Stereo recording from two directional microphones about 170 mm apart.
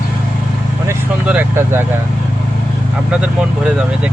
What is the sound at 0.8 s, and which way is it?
Vehicle, 10° right (ahead or behind).